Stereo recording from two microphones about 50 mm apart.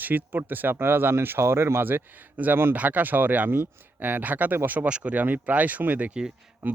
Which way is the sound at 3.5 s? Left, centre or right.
Right.